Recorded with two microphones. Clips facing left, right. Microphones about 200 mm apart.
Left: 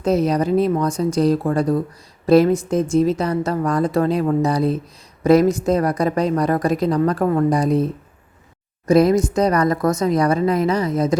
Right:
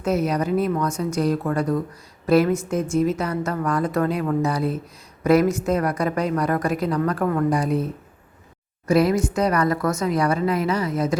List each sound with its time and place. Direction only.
0.0 s a woman's voice: 35° left (ahead or behind)
8.9 s a woman's voice: 40° left (ahead or behind)